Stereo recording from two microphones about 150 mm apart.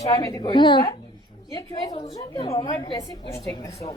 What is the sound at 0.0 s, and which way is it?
Speech, 20° left (ahead or behind).